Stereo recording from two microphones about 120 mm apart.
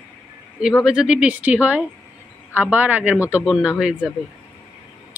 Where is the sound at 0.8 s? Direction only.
5° right (ahead or behind).